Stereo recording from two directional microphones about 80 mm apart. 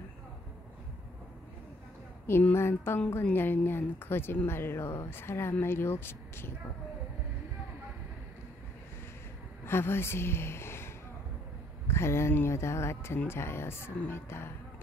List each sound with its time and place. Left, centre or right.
2.5 s speech: left
9.7 s a woman's voice: left
11.9 s speech: left